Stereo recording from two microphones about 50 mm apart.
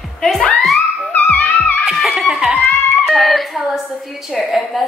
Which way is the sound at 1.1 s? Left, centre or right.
Left.